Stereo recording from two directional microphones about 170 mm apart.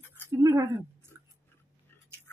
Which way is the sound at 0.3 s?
15° right (ahead or behind).